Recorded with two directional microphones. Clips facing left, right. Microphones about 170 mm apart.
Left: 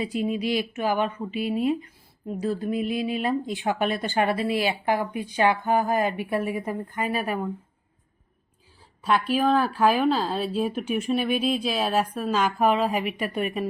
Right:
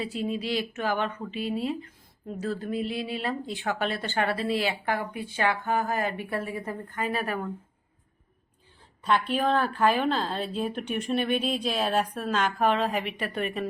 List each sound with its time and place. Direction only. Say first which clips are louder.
0.0 s a woman's voice: left 4 dB; 15° left (ahead or behind)
9.0 s a woman's voice: left 3 dB; 5° left (ahead or behind)